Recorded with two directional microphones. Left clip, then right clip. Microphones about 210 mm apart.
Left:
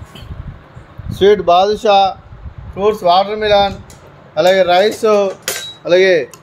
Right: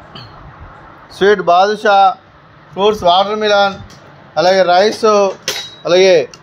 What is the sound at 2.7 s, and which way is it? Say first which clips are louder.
A man's voice: right 1 dB; 10° right (ahead or behind).